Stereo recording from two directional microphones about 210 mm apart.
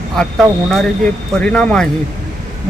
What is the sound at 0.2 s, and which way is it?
Speech, centre (ahead or behind).